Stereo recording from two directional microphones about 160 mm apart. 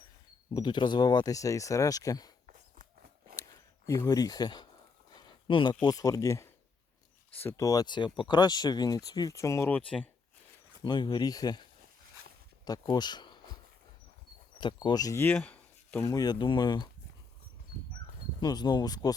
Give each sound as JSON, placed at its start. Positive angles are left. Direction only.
{"t": 0.5, "sound": "speech", "side_deg": 30}
{"t": 2.5, "sound": "walk", "side_deg": -60}
{"t": 3.8, "sound": "speech", "side_deg": 20}
{"t": 5.1, "sound": "a sound", "side_deg": 30}
{"t": 5.8, "sound": "speech", "side_deg": 20}
{"t": 10.8, "sound": "speech", "side_deg": 30}
{"t": 12.6, "sound": "a sound", "side_deg": 25}
{"t": 14.6, "sound": "speech", "side_deg": 30}
{"t": 16.0, "sound": "speech", "side_deg": 25}
{"t": 18.3, "sound": "speech", "side_deg": 25}